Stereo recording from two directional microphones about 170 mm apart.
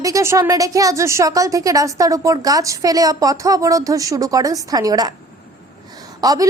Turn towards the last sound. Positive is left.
turn(degrees=-20)  # may be behind; listen again after turning